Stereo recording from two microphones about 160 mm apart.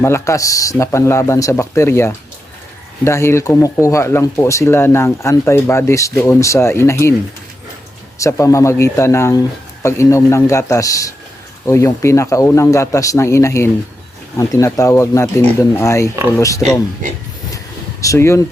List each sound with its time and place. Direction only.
0.0 s speech: 15° left (ahead or behind)
8.2 s speech: 20° left (ahead or behind)
18.0 s speech: 20° left (ahead or behind)